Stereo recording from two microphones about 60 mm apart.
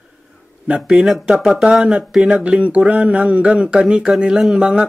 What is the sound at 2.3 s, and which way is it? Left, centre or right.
Speech, centre.